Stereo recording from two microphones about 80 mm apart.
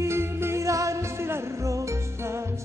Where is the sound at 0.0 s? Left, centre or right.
Right.